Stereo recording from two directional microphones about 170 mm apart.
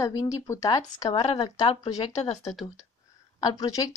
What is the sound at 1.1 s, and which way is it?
Speech, 35° left (ahead or behind).